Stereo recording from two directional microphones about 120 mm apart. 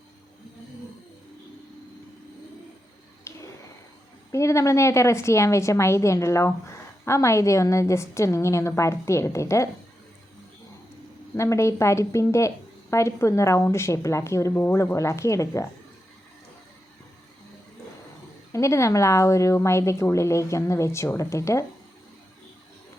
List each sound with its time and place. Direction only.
3.3 s a sound: 20° left (ahead or behind)
4.3 s a woman's voice: 25° left (ahead or behind)
11.3 s a woman's voice: 25° left (ahead or behind)
18.5 s a woman's voice: 25° left (ahead or behind)